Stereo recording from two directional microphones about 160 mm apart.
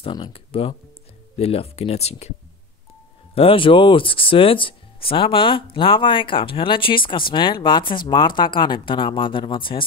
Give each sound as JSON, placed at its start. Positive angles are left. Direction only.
{"t": 0.0, "sound": "speech", "side_deg": 35}
{"t": 3.3, "sound": "speech", "side_deg": 35}